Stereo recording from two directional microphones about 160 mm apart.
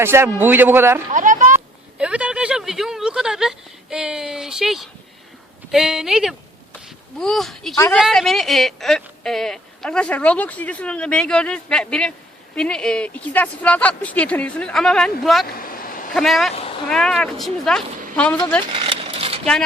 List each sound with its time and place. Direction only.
0.0 s a man's voice: 15° right (ahead or behind)
1.1 s a sound: 55° right (ahead or behind)
1.5 s a child's voice: 5° right (ahead or behind)
15.5 s vehicle: 65° left (ahead or behind)
16.1 s speech: centre (ahead or behind)
18.7 s a sound: 35° right (ahead or behind)